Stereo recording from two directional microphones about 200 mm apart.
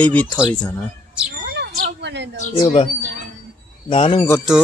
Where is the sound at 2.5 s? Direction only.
25° left (ahead or behind).